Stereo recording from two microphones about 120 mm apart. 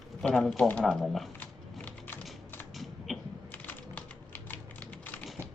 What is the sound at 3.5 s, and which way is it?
Typing, 15° left (ahead or behind).